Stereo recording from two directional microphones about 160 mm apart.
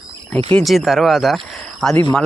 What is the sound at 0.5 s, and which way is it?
A man's voice, centre (ahead or behind).